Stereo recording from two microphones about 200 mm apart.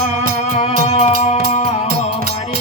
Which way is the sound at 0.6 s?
30° left (ahead or behind).